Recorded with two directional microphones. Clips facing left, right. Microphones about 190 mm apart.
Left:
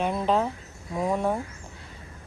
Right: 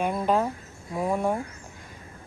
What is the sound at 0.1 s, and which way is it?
A woman's voice, 10° right (ahead or behind).